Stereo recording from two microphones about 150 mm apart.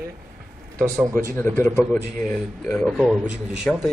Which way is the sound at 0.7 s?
20° right (ahead or behind).